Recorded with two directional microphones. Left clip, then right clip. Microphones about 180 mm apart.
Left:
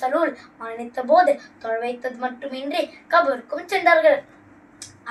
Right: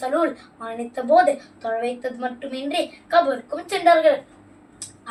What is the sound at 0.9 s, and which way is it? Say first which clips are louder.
A woman's voice: even; 15° right (ahead or behind).